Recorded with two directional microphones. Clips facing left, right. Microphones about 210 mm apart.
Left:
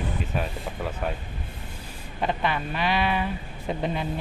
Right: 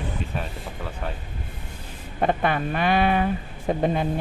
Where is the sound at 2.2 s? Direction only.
50° right (ahead or behind).